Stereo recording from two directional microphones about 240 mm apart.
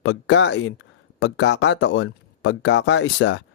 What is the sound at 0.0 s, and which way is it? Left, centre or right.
Speech, left.